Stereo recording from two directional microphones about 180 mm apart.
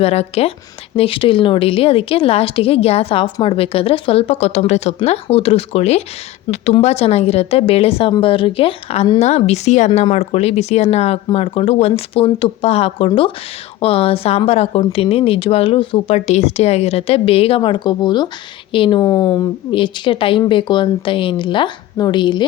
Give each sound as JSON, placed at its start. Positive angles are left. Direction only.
{"t": 0.0, "sound": "a woman's voice", "side_deg": 35}